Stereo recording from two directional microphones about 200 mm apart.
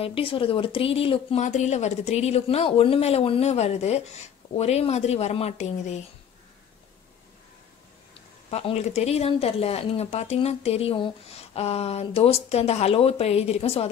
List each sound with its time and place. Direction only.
0.0 s speech: 25° left (ahead or behind)
8.5 s speech: 30° left (ahead or behind)